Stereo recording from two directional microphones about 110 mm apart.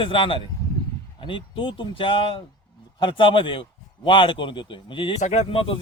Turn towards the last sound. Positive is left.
turn(degrees=55)  # may be behind; listen again after turning